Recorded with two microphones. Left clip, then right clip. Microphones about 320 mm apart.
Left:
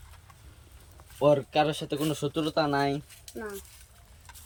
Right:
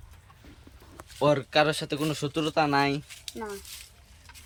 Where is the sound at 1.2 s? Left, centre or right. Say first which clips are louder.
Even; right.